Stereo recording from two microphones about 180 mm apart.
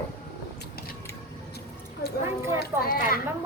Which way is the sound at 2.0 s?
60° left (ahead or behind).